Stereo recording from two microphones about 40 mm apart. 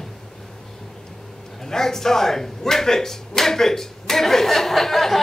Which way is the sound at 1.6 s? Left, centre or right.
Centre.